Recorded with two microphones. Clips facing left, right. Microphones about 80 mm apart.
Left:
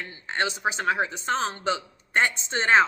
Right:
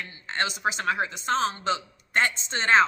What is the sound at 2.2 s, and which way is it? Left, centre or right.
Speech, centre.